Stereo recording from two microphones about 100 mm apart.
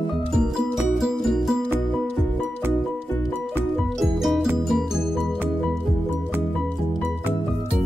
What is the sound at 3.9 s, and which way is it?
Music, centre (ahead or behind).